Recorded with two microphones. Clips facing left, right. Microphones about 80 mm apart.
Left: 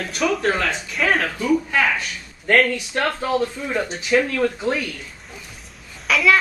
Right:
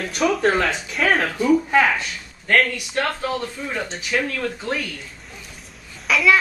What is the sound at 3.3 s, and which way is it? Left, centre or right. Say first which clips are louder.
Speech: left 4 dB; centre.